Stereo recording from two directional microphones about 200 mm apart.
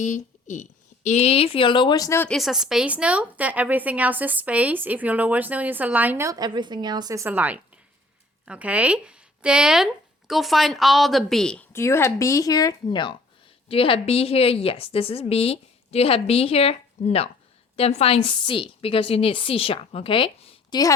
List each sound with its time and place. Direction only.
0.0 s a woman's voice: 40° left (ahead or behind); by 20.9 s 20° left (ahead or behind)